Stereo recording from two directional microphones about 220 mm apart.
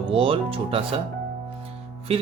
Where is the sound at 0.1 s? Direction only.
25° right (ahead or behind).